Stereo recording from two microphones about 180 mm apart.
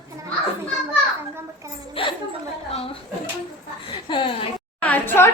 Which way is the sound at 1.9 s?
30° left (ahead or behind).